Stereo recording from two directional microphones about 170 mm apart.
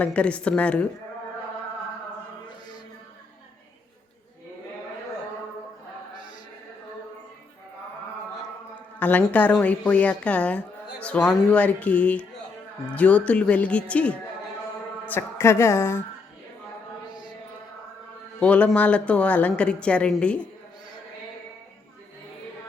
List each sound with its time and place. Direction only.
0.0 s a woman's voice: 5° left (ahead or behind)
9.0 s a woman's voice: 10° left (ahead or behind)
18.3 s a woman's voice: 5° left (ahead or behind)